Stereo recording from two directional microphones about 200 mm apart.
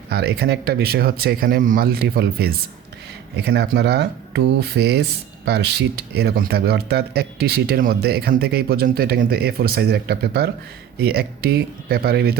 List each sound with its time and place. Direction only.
0.1 s speech: 55° right (ahead or behind)